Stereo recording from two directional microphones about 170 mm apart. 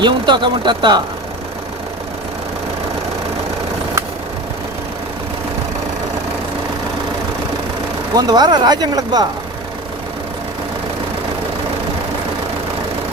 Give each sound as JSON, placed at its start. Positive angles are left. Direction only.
{"t": 0.0, "sound": "speech", "side_deg": -25}
{"t": 8.1, "sound": "speech", "side_deg": -25}